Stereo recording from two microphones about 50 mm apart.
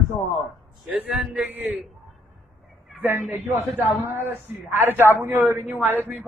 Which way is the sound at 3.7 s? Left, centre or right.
Right.